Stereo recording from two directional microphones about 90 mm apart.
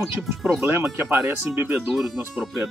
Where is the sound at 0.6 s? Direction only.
25° right (ahead or behind).